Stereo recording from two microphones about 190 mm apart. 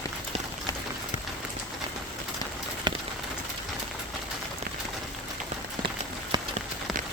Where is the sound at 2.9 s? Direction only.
25° right (ahead or behind).